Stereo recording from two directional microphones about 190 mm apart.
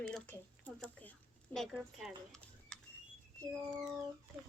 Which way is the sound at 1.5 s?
Centre (ahead or behind).